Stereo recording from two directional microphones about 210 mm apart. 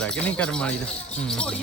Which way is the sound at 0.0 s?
5° left (ahead or behind).